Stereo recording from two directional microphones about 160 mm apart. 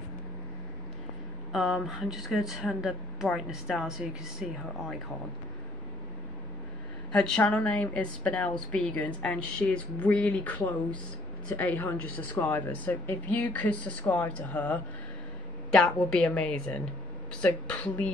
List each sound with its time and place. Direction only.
1.5 s speech: centre (ahead or behind)
7.1 s a woman's voice: 5° left (ahead or behind)